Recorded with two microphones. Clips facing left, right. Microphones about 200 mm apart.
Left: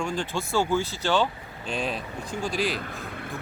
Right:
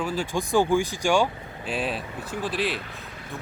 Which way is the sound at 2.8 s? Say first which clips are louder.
Left 4 dB; 55° left (ahead or behind).